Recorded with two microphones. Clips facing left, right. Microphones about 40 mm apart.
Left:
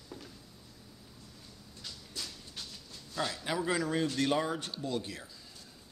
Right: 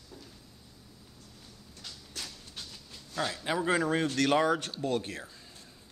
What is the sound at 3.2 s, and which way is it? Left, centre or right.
Speech, centre.